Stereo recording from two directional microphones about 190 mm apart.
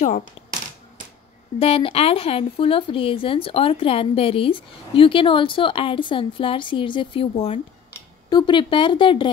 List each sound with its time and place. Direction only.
1.6 s speech: 30° left (ahead or behind)